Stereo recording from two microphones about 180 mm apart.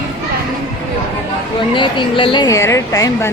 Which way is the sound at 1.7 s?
25° left (ahead or behind).